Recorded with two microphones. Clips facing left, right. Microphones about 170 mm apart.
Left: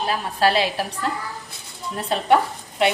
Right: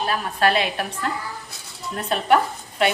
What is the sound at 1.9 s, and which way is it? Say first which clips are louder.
A woman's voice: even; 25° left (ahead or behind).